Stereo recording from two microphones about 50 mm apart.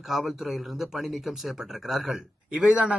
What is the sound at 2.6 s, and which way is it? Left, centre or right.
Speech, right.